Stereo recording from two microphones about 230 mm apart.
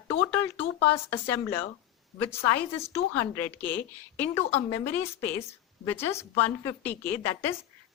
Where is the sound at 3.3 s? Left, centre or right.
Centre.